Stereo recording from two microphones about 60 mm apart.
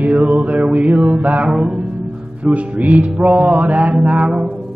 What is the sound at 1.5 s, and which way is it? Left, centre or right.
Mantra, centre.